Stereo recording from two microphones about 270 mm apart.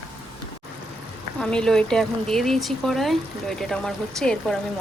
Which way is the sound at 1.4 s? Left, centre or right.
Centre.